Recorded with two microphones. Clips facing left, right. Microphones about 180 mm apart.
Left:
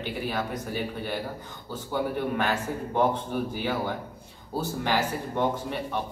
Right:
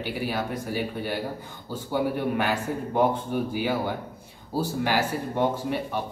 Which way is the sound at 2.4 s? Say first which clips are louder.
Right 1 dB; 10° right (ahead or behind).